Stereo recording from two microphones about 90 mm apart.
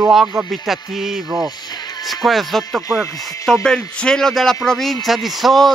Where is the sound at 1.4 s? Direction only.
50° left (ahead or behind).